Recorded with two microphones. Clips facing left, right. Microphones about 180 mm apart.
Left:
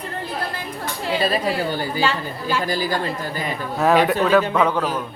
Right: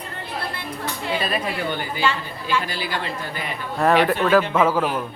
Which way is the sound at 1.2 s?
35° left (ahead or behind).